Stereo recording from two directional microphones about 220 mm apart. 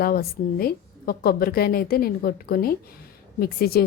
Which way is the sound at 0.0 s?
45° left (ahead or behind).